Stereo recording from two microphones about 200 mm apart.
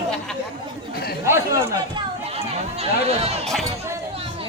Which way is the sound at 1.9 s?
30° right (ahead or behind).